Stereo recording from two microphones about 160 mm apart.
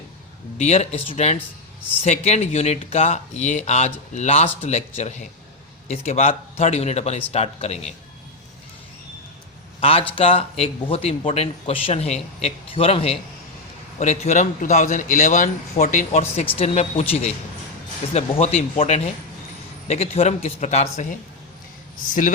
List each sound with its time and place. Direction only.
0.6 s speech: 40° left (ahead or behind)
9.8 s speech: 35° left (ahead or behind)
22.0 s a man's voice: 60° left (ahead or behind)